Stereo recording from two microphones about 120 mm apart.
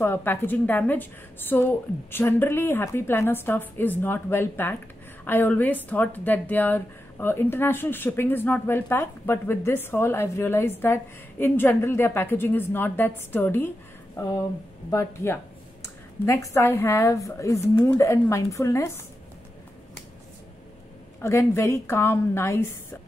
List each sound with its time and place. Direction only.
0.0 s a woman's voice: 15° left (ahead or behind)
21.2 s a woman's voice: 25° left (ahead or behind)